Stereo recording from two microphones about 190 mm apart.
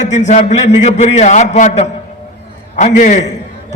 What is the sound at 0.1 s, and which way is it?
A man's voice, 40° left (ahead or behind).